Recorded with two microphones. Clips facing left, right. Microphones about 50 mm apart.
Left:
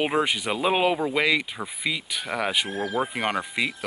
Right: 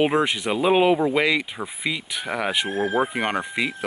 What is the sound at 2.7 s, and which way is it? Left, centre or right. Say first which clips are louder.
Speech: right 4 dB; right.